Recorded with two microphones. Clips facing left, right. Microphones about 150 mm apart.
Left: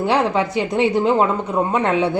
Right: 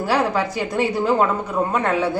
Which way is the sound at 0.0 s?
20° left (ahead or behind).